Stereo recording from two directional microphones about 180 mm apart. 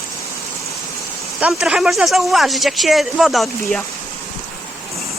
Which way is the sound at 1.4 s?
5° right (ahead or behind).